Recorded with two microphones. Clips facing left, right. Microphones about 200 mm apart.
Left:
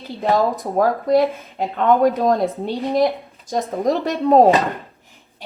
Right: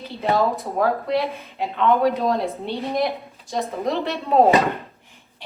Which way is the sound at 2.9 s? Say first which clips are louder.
Left 7 dB; 35° left (ahead or behind).